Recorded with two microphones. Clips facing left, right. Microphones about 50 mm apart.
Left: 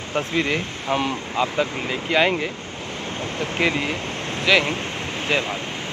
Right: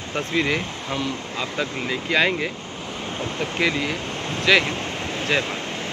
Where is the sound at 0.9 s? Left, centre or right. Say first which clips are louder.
Left 4 dB; left.